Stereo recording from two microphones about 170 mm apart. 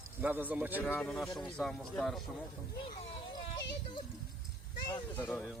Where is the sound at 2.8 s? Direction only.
40° left (ahead or behind).